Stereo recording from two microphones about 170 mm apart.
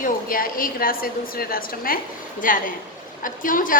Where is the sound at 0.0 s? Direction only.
55° left (ahead or behind).